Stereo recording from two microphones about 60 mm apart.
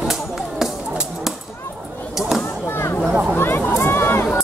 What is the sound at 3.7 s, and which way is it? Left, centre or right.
Run, left.